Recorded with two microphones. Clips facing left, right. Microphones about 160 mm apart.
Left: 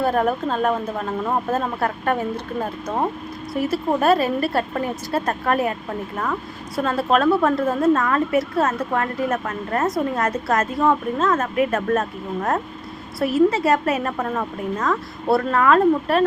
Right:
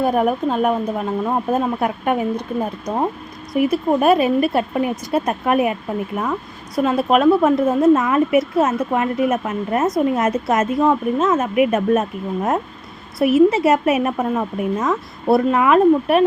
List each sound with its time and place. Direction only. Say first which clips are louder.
0.0 s a woman's voice: right 3 dB; 10° right (ahead or behind)
6.8 s a woman's voice: right 4 dB; 15° right (ahead or behind)